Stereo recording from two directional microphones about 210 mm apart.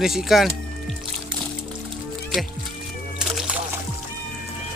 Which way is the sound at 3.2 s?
5° right (ahead or behind).